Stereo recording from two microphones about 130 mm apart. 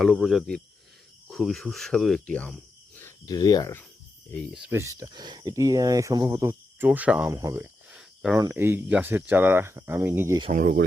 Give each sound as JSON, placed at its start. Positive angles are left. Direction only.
{"t": 0.0, "sound": "speech", "side_deg": 0}
{"t": 3.2, "sound": "speech", "side_deg": 30}
{"t": 4.7, "sound": "speech", "side_deg": -25}
{"t": 6.8, "sound": "speech", "side_deg": -10}
{"t": 7.3, "sound": "speech", "side_deg": -25}
{"t": 7.9, "sound": "cricket", "side_deg": -5}
{"t": 8.4, "sound": "speech", "side_deg": -20}
{"t": 10.5, "sound": "speech", "side_deg": -80}